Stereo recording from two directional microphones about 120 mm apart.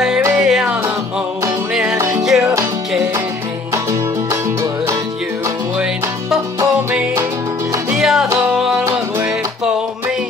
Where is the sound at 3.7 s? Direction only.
25° right (ahead or behind).